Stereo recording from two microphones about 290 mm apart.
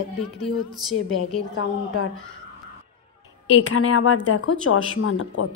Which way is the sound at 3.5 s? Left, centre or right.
Left.